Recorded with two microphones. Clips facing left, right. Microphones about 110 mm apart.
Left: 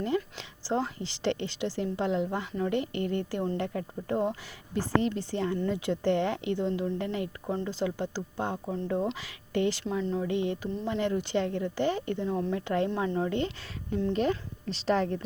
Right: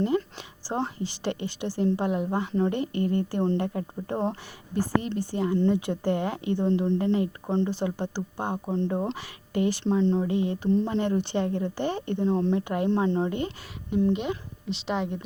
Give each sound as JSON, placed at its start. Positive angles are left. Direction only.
{"t": 0.0, "sound": "a sound", "side_deg": -25}
{"t": 0.7, "sound": "speech", "side_deg": -25}
{"t": 6.7, "sound": "speech", "side_deg": -30}
{"t": 14.8, "sound": "a woman's voice", "side_deg": -5}